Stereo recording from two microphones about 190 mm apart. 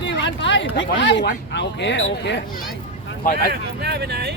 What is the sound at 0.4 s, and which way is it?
Speech, 75° left (ahead or behind).